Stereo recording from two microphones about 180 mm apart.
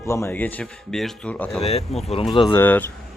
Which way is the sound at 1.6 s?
35° left (ahead or behind).